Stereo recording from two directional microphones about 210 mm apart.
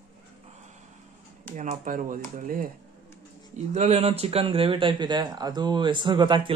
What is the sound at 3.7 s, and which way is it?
Speech, 30° right (ahead or behind).